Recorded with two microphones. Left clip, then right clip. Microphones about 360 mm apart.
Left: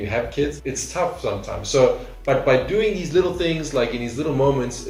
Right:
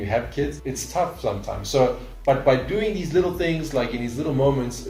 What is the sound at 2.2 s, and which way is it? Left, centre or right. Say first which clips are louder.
Speech: left 1 dB; centre.